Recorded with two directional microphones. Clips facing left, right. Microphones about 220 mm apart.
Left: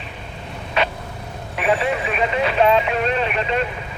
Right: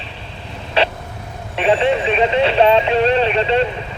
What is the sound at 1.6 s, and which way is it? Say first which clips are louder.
Vehicle: right 5 dB; 30° right (ahead or behind).